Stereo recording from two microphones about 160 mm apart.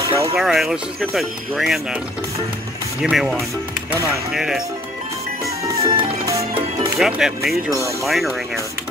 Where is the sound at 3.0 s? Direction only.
Centre (ahead or behind).